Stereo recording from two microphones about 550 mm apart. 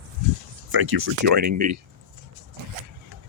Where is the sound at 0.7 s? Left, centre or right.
Right.